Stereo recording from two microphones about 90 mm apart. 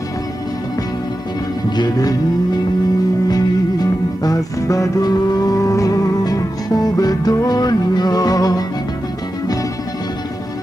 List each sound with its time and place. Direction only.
1.8 s music: 45° left (ahead or behind)